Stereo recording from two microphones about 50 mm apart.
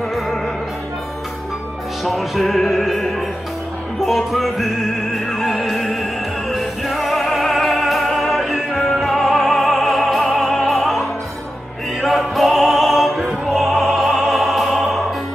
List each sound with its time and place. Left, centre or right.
2.0 s music: centre
12.0 s opera: centre